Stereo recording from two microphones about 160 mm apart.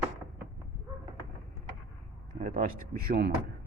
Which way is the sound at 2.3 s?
55° right (ahead or behind).